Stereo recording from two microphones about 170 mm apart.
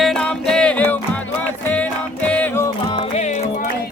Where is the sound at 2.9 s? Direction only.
40° left (ahead or behind).